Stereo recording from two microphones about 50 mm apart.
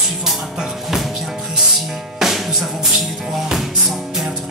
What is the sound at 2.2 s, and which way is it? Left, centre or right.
Music, centre.